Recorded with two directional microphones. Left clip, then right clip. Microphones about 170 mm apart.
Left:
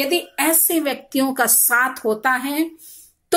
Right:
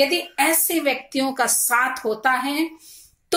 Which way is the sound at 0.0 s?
20° left (ahead or behind).